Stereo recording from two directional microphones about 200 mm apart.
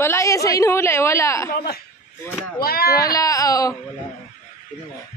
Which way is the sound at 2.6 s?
50° left (ahead or behind).